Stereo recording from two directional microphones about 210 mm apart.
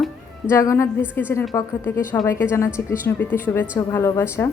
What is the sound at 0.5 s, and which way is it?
A woman's voice, 15° left (ahead or behind).